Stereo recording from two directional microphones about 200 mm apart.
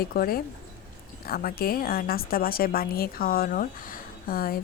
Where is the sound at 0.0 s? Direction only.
45° left (ahead or behind).